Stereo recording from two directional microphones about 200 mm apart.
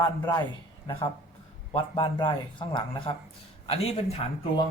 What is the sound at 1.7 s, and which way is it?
A man's voice, 25° left (ahead or behind).